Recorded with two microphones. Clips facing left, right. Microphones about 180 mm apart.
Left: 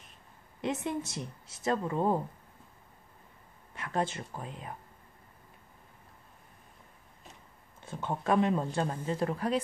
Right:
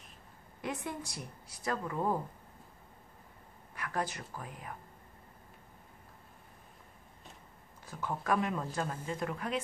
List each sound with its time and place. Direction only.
0.6 s speech: 25° left (ahead or behind)
3.7 s speech: 25° left (ahead or behind)
7.8 s speech: 25° left (ahead or behind)